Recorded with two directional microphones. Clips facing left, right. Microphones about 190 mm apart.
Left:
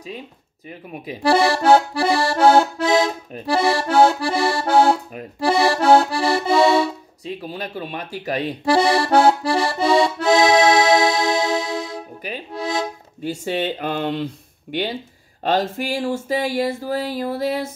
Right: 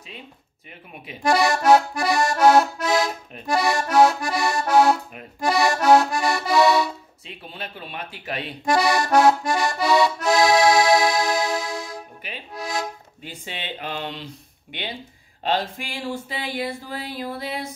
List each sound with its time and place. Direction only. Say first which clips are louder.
0.7 s speech: left 8 dB; 35° left (ahead or behind)
3.3 s accordion: left 3 dB; 35° left (ahead or behind)
7.2 s accordion: left 8 dB; 40° left (ahead or behind)
12.3 s music: left 6 dB; 35° left (ahead or behind)
13.3 s a sound: left 12 dB; 45° left (ahead or behind)